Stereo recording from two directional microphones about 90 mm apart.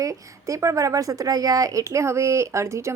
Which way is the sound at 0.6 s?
35° right (ahead or behind).